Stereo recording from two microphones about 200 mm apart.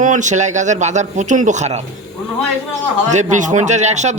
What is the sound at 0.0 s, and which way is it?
A man's voice, 40° right (ahead or behind).